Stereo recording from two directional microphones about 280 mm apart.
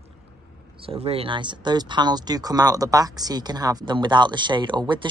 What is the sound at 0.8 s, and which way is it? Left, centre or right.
Speech, right.